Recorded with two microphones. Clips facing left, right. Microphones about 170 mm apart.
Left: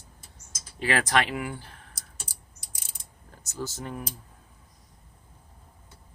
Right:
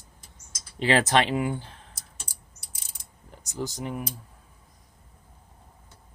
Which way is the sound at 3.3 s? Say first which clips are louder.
Right 2 dB; 15° right (ahead or behind).